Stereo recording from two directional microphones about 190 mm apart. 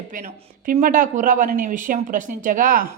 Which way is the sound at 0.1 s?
45° right (ahead or behind).